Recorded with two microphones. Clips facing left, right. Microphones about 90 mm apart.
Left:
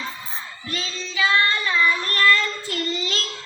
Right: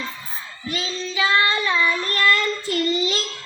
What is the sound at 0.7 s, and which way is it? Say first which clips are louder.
Child singing: right 4 dB; 10° right (ahead or behind).